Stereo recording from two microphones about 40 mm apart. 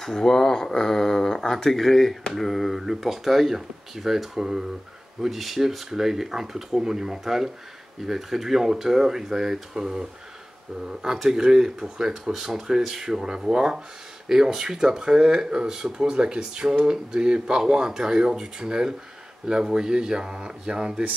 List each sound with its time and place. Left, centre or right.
0.0 s speech: centre